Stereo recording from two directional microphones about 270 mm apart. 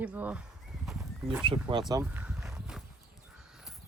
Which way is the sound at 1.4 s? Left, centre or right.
Centre.